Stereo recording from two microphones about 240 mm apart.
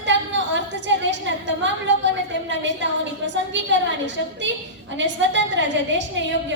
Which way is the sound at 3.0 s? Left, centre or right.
Right.